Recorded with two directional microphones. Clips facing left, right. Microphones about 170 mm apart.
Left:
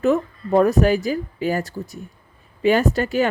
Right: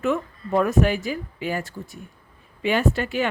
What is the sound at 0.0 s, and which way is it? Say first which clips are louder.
Speech: left 5 dB; 35° left (ahead or behind).